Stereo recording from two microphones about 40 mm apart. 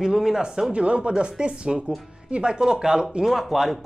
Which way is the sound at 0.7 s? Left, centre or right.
Right.